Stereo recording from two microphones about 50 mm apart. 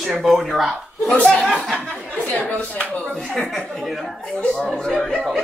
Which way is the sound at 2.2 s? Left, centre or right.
Left.